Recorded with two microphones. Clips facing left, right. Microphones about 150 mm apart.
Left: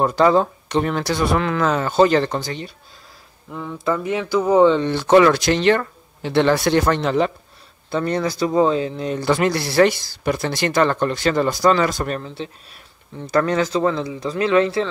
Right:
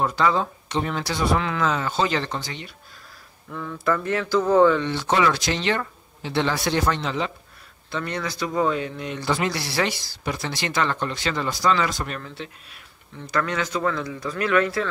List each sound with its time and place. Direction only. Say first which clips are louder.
0.0 s speech: left 6 dB; 40° left (ahead or behind)
3.4 s mantra: left 2 dB; 15° left (ahead or behind)
4.8 s speech: left 8 dB; 55° left (ahead or behind)
7.9 s speech: left 8 dB; 35° left (ahead or behind)
9.2 s speech: left 6 dB; 55° left (ahead or behind)
12.2 s speech: left 5 dB; 30° left (ahead or behind)